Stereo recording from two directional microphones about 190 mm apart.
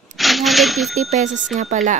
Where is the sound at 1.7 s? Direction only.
40° right (ahead or behind).